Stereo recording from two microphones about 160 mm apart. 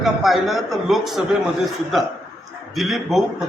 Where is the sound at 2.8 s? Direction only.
Centre (ahead or behind).